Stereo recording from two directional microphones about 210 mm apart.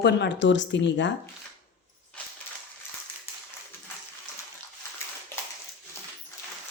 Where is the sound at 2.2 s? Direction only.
5° left (ahead or behind).